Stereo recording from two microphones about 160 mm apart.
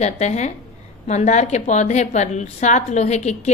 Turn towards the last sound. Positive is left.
turn(degrees=45)  # may be behind; listen again after turning